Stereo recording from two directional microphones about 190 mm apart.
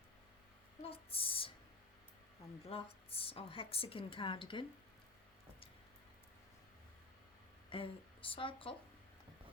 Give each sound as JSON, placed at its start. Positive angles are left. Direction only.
{"t": 0.8, "sound": "a sound", "side_deg": 30}
{"t": 2.6, "sound": "a woman's voice", "side_deg": 30}
{"t": 7.7, "sound": "speech", "side_deg": 30}